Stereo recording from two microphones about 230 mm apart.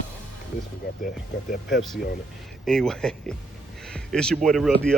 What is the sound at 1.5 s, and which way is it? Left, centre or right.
Speech, left.